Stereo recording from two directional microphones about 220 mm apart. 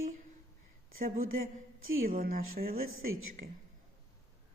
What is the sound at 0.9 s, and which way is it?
Speech, 40° right (ahead or behind).